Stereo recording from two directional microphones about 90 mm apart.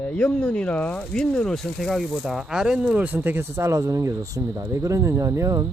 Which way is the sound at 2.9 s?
20° right (ahead or behind).